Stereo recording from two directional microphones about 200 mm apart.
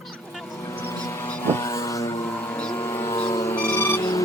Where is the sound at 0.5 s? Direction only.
15° left (ahead or behind).